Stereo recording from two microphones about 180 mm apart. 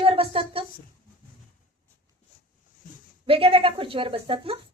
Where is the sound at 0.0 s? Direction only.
30° right (ahead or behind).